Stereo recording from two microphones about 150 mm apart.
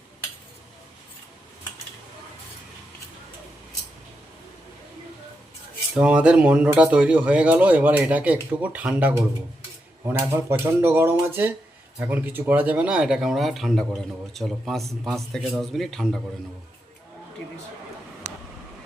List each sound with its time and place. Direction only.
5.9 s speech: 5° right (ahead or behind)